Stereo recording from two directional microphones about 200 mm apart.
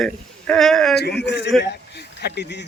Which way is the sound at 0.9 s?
55° left (ahead or behind).